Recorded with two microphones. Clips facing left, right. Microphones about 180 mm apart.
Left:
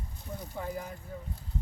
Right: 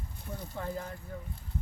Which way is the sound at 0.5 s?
10° left (ahead or behind).